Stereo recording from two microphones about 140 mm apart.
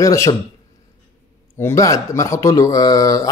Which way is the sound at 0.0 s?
20° left (ahead or behind).